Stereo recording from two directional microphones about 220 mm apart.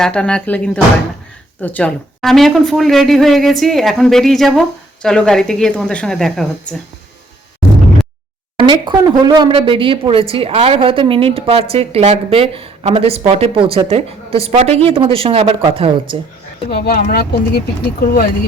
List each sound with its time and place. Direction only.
0.0 s a woman's voice: 5° left (ahead or behind)
8.5 s speech: 20° right (ahead or behind)
16.6 s speech: 45° left (ahead or behind)